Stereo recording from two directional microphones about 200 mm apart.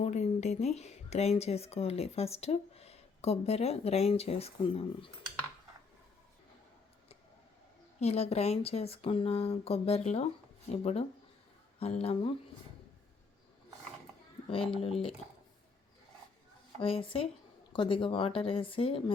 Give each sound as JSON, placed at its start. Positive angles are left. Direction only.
{"t": 0.0, "sound": "speech", "side_deg": 35}
{"t": 7.9, "sound": "speech", "side_deg": 30}
{"t": 14.5, "sound": "speech", "side_deg": 25}
{"t": 16.8, "sound": "speech", "side_deg": 25}